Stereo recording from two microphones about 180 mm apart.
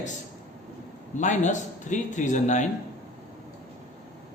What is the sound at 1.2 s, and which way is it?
Speech, 40° left (ahead or behind).